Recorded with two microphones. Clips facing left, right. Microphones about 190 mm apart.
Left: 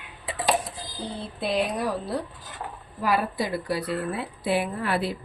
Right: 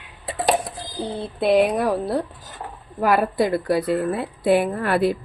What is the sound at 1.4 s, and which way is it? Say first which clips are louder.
A woman's voice: right 8 dB; 60° right (ahead or behind).